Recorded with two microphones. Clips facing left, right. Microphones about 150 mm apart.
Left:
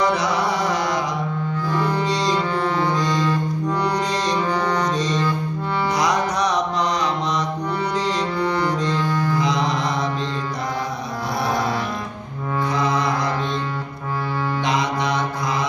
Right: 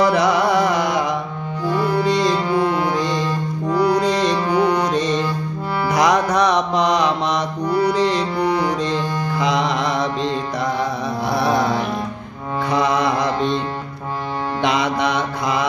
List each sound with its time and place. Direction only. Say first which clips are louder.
0.1 s music: right 5 dB; 60° right (ahead or behind)
1.7 s music: right 5 dB; 10° right (ahead or behind)
5.9 s mantra: right 7 dB; 65° right (ahead or behind)
8.4 s music: right 3 dB; 10° right (ahead or behind)
9.4 s music: right 2 dB; 70° right (ahead or behind)
14.6 s mantra: right 5 dB; 70° right (ahead or behind)